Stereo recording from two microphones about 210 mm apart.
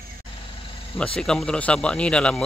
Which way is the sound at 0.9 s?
5° left (ahead or behind).